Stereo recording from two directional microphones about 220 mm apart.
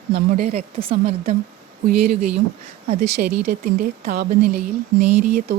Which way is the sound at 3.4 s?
40° right (ahead or behind).